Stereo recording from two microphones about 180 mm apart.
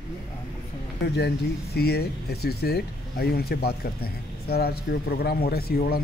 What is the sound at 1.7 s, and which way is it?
Speech, 60° left (ahead or behind).